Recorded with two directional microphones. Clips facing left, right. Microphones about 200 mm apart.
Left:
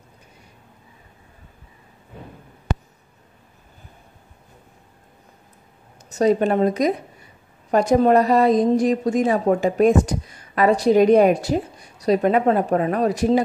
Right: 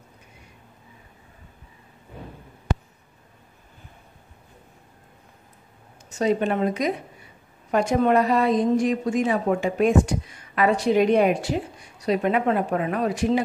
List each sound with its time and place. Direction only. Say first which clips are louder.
6.0 s a woman's voice: left 4 dB; 40° left (ahead or behind)